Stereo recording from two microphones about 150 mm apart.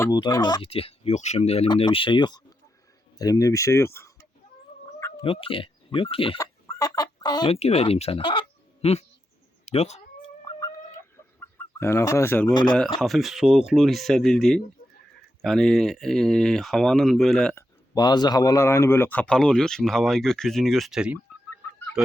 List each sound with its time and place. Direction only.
0.0 s speech: 25° left (ahead or behind)
0.6 s speech: 40° left (ahead or behind); by 4.3 s 20° left (ahead or behind)
5.2 s speech: 35° left (ahead or behind)
6.4 s chicken: 25° left (ahead or behind)
7.5 s speech: 40° left (ahead or behind)
11.3 s speech: 15° left (ahead or behind)
13.0 s speech: centre (ahead or behind)
17.5 s speech: 25° left (ahead or behind); by 22.1 s 5° right (ahead or behind)